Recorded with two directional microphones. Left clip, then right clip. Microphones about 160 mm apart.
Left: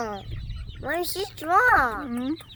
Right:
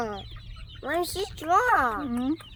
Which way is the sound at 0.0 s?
15° left (ahead or behind).